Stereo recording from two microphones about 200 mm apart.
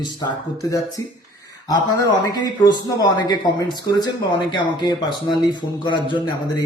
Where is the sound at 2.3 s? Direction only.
20° left (ahead or behind).